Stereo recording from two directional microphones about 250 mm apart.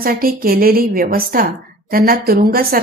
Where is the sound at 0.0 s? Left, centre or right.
Right.